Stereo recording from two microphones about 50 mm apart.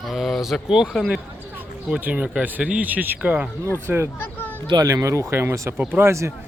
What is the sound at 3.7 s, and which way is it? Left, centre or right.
Speech, right.